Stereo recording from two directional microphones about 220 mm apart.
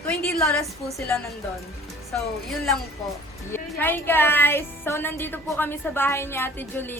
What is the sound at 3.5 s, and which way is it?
A woman's voice, 10° left (ahead or behind).